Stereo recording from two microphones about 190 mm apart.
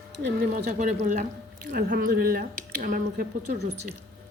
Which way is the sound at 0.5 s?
45° right (ahead or behind).